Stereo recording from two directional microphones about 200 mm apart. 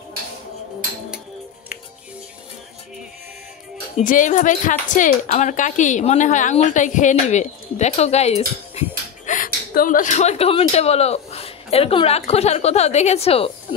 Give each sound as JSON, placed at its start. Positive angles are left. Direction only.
{"t": 4.0, "sound": "a woman's voice", "side_deg": 40}